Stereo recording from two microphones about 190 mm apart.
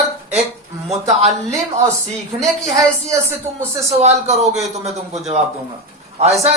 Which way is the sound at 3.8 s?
35° right (ahead or behind).